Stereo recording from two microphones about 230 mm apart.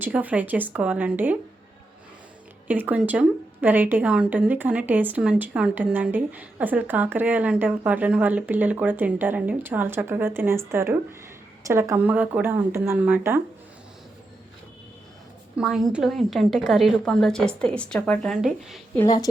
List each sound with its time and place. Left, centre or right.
0.0 s a woman's voice: centre
2.6 s a woman's voice: centre
15.5 s a woman's voice: centre